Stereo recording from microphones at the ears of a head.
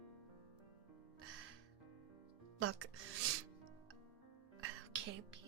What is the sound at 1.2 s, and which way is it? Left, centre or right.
Music, right.